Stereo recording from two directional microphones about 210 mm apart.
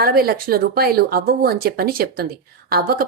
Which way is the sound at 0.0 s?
45° right (ahead or behind).